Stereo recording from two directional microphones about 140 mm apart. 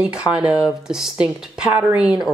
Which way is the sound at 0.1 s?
5° right (ahead or behind).